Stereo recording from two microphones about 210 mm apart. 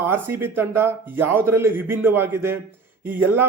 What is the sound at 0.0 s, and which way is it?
A man's voice, 10° right (ahead or behind).